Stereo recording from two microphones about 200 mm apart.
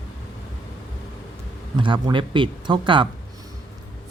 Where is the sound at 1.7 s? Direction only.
25° right (ahead or behind).